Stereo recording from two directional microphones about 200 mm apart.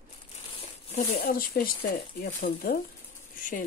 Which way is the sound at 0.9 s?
45° left (ahead or behind).